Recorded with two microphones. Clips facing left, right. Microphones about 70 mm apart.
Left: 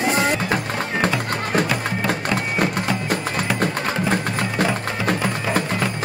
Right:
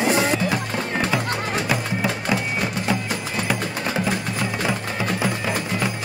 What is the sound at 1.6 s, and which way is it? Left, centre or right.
Music, centre.